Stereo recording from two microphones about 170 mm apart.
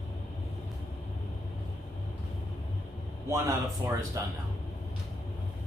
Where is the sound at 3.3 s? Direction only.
15° right (ahead or behind).